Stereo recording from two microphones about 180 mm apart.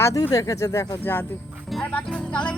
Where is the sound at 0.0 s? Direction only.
20° left (ahead or behind).